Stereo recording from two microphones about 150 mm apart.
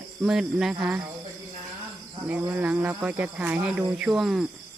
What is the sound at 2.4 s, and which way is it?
Speech, 10° right (ahead or behind).